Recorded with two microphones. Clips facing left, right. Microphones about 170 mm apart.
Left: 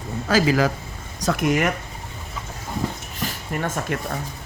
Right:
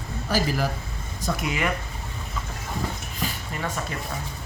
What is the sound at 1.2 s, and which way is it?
Speech, 60° left (ahead or behind).